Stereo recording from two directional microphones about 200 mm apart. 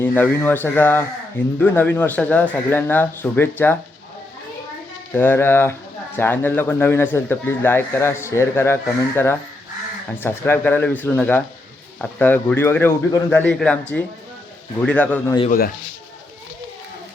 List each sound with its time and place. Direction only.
0.0 s a man's voice: 10° left (ahead or behind)
5.1 s a man's voice: 10° left (ahead or behind)
14.8 s a man's voice: 5° left (ahead or behind)
15.4 s speech: 50° left (ahead or behind)